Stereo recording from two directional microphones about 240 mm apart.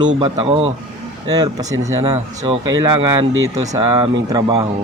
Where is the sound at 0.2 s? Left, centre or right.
Right.